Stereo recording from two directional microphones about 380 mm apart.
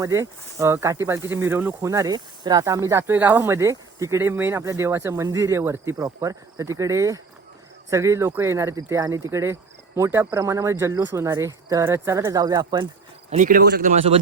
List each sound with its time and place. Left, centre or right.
0.0 s speech: centre